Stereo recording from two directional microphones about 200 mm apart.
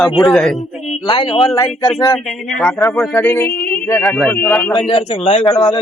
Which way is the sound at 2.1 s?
Centre (ahead or behind).